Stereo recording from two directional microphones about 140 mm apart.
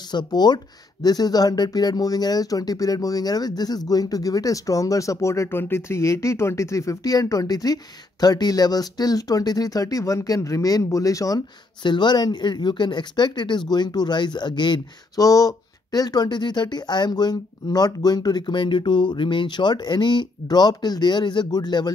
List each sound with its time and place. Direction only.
0.1 s speech: 30° left (ahead or behind)